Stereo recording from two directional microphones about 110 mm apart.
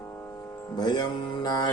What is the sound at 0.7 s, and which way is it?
Music, 40° left (ahead or behind).